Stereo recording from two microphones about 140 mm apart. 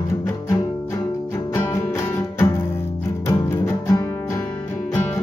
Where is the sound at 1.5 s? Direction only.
20° left (ahead or behind).